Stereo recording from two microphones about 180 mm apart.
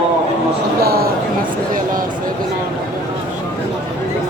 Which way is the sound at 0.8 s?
60° right (ahead or behind).